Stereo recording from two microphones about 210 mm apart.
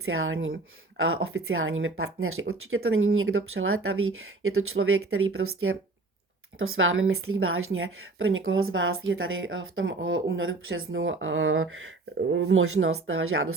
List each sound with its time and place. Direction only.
0.0 s a woman's voice: 75° right (ahead or behind)